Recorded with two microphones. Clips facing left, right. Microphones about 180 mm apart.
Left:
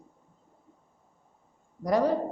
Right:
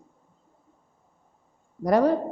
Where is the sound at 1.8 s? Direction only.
60° right (ahead or behind).